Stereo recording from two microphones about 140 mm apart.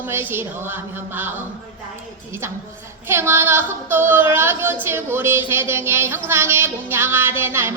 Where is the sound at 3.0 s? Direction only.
15° right (ahead or behind).